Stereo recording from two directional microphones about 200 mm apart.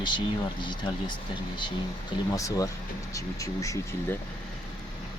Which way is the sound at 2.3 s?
15° left (ahead or behind).